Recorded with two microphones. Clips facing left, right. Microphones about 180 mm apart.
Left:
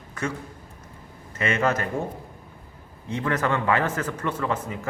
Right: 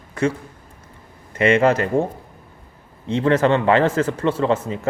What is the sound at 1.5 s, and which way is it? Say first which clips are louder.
Speech: right 8 dB; 30° right (ahead or behind).